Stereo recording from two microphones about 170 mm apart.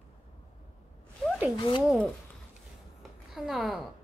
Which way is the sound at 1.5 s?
30° left (ahead or behind).